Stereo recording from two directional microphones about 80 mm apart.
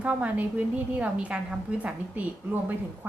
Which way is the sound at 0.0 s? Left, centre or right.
Centre.